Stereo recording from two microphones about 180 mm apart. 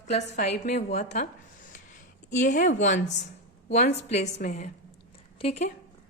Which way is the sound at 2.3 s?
40° left (ahead or behind).